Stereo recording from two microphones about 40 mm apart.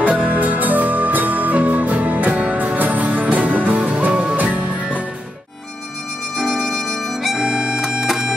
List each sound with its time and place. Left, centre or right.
0.0 s music: right
6.3 s music: centre